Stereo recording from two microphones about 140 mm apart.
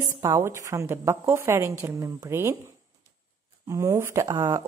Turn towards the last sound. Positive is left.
turn(degrees=-30)  # may be behind; listen again after turning